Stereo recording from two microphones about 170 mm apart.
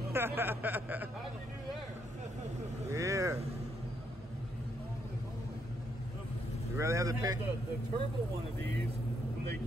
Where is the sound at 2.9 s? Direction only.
20° right (ahead or behind).